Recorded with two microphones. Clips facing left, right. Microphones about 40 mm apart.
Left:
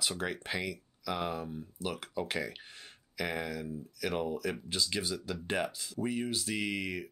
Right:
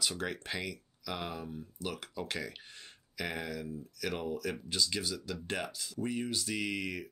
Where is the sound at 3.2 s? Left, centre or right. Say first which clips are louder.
Left 2 dB; centre.